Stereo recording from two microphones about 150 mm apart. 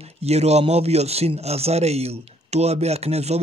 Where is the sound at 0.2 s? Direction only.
45° right (ahead or behind).